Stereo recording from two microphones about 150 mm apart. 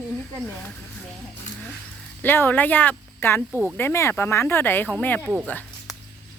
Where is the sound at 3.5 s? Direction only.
15° right (ahead or behind).